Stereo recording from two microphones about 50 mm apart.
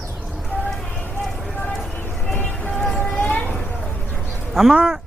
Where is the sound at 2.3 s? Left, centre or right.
Left.